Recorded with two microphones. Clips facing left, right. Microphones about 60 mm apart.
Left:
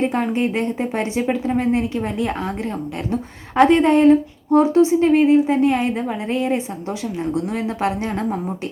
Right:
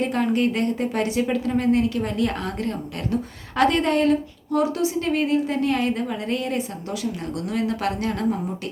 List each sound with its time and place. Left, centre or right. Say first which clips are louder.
0.0 s speech: left 2 dB; left